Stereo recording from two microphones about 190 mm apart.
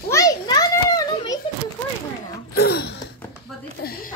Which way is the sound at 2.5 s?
55° left (ahead or behind).